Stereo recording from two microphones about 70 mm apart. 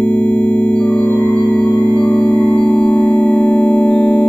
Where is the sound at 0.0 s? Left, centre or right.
Left.